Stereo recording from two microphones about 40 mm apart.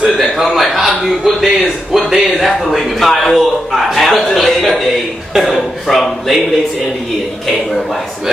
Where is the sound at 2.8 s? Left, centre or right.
Centre.